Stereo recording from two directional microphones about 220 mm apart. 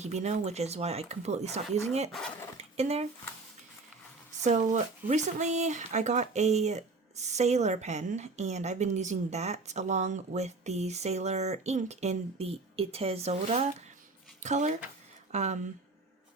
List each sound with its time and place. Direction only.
0.0 s speech: 30° right (ahead or behind)
2.6 s a sound: 30° right (ahead or behind)
4.4 s speech: 35° right (ahead or behind)